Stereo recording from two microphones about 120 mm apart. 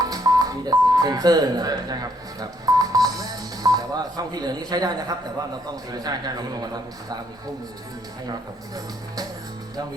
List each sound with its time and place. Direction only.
0.0 s telephone dialing: 30° right (ahead or behind)
5.9 s a man's voice: 35° right (ahead or behind)
8.3 s a man's voice: 30° right (ahead or behind)